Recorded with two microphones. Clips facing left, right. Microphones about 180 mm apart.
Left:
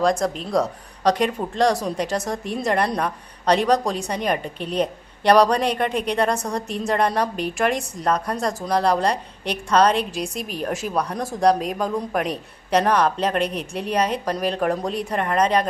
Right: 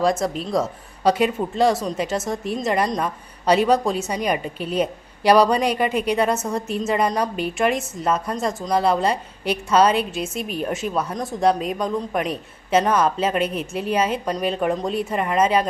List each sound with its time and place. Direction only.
0.0 s a woman's voice: 5° right (ahead or behind)